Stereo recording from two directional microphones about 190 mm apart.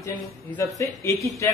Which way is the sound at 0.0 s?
15° left (ahead or behind).